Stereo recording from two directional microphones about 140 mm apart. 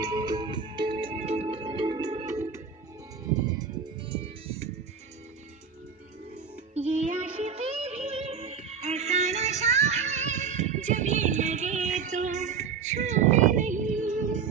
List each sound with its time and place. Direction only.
0.0 s music: 30° right (ahead or behind)
4.0 s music: 40° right (ahead or behind)
6.7 s music: 50° right (ahead or behind); by 14.5 s 65° right (ahead or behind)